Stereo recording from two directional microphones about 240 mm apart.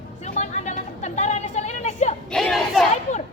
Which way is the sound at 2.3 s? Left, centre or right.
Centre.